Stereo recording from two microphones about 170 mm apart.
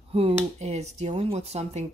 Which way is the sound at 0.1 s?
35° right (ahead or behind).